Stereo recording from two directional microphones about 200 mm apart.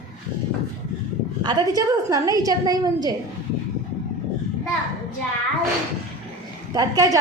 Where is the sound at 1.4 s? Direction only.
20° right (ahead or behind).